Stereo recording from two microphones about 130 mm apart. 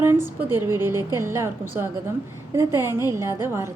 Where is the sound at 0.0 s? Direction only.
15° right (ahead or behind).